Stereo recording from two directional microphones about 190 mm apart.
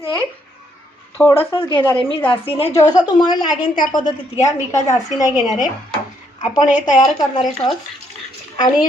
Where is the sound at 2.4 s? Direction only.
30° left (ahead or behind).